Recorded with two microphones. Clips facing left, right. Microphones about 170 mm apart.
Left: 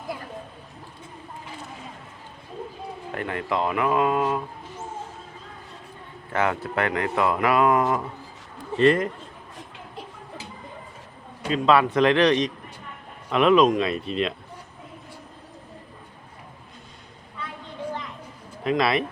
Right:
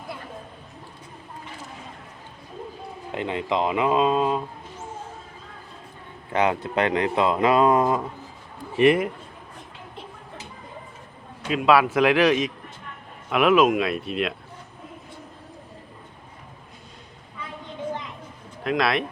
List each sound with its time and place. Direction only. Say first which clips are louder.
3.1 s speech: right 2 dB; 20° right (ahead or behind)
6.3 s speech: right 2 dB; 20° right (ahead or behind)
8.7 s a man's voice: right 1 dB; 10° right (ahead or behind)
11.4 s speech: right 1 dB; 5° right (ahead or behind)
18.6 s speech: left 1 dB; centre (ahead or behind)